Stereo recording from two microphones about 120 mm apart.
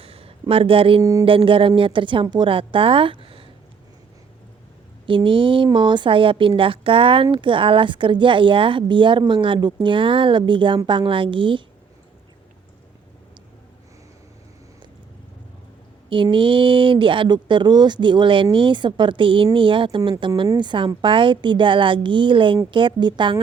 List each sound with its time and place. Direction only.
0.0 s a sound: 50° right (ahead or behind)
1.2 s speech: 50° right (ahead or behind)
5.0 s speech: 45° right (ahead or behind)
16.0 s a woman's voice: 45° right (ahead or behind)